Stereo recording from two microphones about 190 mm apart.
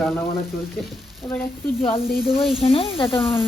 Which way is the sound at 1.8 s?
30° left (ahead or behind).